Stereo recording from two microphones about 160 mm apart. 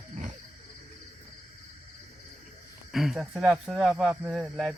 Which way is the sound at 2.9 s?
Centre (ahead or behind).